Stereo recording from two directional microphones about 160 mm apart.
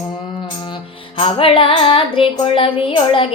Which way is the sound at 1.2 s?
35° left (ahead or behind).